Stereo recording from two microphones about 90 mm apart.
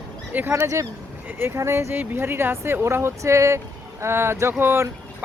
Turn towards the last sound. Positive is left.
turn(degrees=-25)  # may be behind; listen again after turning